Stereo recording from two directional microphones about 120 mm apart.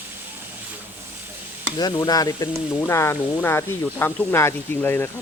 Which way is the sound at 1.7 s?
35° left (ahead or behind).